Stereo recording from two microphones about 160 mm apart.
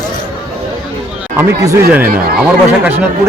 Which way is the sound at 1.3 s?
20° right (ahead or behind).